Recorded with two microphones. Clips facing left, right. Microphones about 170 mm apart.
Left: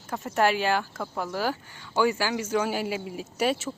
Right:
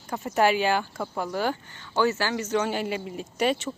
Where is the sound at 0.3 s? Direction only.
Centre (ahead or behind).